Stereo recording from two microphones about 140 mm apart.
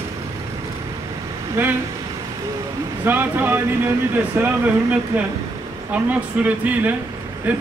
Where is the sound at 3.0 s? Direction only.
15° right (ahead or behind).